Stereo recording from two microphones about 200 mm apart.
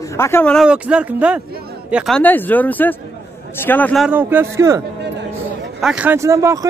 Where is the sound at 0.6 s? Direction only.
5° right (ahead or behind).